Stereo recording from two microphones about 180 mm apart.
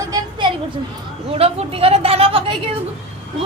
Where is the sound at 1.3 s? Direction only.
35° right (ahead or behind).